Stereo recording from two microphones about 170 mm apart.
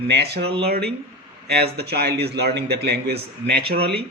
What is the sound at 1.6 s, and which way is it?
Speech, 70° right (ahead or behind).